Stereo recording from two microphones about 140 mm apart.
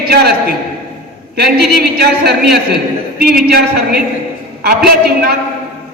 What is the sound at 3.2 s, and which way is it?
Speech, 90° right.